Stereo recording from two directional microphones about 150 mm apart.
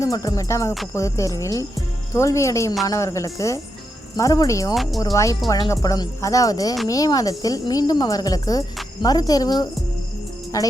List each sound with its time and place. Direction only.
0.0 s speech: 25° left (ahead or behind)
4.7 s speech: centre (ahead or behind)
4.9 s speech: 20° left (ahead or behind)